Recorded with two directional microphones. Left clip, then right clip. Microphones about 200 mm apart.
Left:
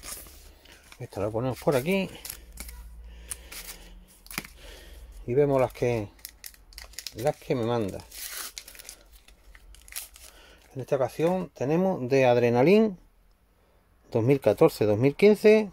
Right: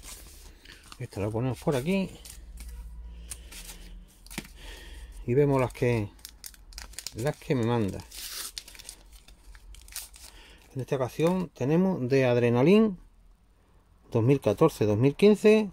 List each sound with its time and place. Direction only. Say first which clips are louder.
0.7 s speech: even; 10° right (ahead or behind)
1.6 s speech: left 4 dB; 15° left (ahead or behind)
4.2 s a sound: left 4 dB; 25° left (ahead or behind)
4.6 s a sound: right 1 dB; 10° right (ahead or behind)
7.0 s crumpling: left 4 dB; 5° right (ahead or behind)
9.8 s speech: left 1 dB; 10° right (ahead or behind)
14.1 s speech: left 2 dB; 5° left (ahead or behind)